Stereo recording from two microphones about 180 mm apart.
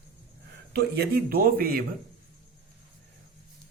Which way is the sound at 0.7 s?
60° right (ahead or behind).